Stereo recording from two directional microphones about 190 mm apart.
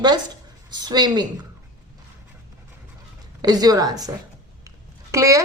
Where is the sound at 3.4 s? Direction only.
20° right (ahead or behind).